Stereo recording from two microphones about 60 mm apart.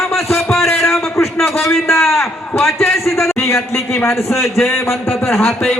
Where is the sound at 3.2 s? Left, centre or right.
Left.